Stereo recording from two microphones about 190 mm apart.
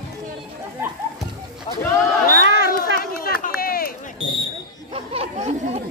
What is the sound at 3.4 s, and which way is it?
Run, 50° left (ahead or behind).